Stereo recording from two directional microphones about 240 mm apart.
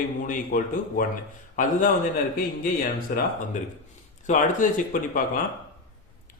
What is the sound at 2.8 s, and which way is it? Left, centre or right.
A man's voice, left.